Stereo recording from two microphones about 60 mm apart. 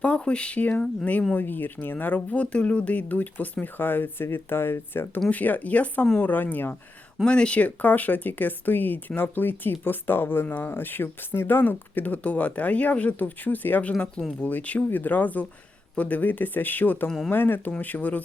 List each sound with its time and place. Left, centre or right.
0.0 s speech: centre
1.4 s speech: left
5.3 s speech: left
7.3 s speech: centre
17.1 s speech: centre
17.3 s speech: left